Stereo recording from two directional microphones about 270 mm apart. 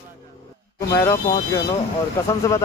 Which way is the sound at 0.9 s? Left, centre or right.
Centre.